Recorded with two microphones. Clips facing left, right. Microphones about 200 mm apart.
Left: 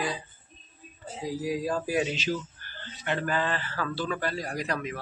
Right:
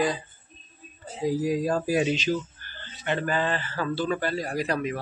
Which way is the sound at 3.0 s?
25° right (ahead or behind).